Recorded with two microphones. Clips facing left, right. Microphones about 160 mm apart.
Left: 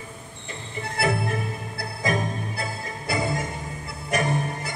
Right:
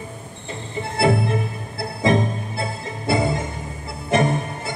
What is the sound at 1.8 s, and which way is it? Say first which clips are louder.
Music: right 7 dB; 25° right (ahead or behind).